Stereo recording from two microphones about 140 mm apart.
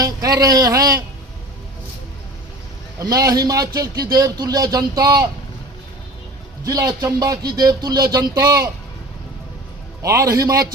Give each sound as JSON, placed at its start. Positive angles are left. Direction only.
{"t": 0.0, "sound": "speech", "side_deg": -25}
{"t": 3.0, "sound": "speech", "side_deg": -25}
{"t": 6.7, "sound": "speech", "side_deg": -25}
{"t": 10.0, "sound": "speech", "side_deg": -25}